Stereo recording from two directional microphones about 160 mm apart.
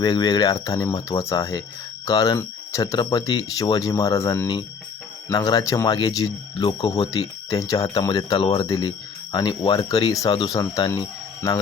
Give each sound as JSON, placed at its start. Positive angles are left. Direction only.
{"t": 0.0, "sound": "speech", "side_deg": 25}